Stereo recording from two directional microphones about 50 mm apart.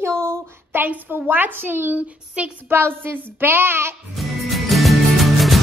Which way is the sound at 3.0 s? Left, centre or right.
Right.